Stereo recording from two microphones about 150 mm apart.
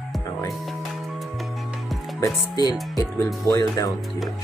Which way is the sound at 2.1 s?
25° left (ahead or behind).